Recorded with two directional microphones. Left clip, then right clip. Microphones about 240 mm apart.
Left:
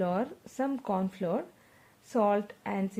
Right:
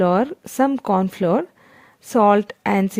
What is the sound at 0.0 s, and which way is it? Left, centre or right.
Speech, right.